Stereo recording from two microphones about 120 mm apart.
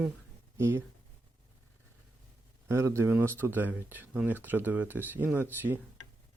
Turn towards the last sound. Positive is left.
turn(degrees=-15)  # may be behind; listen again after turning